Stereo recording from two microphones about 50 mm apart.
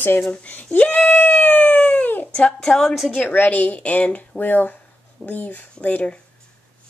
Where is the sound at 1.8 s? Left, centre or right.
Left.